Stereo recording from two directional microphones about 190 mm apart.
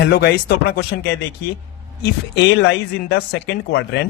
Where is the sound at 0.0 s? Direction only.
60° left (ahead or behind).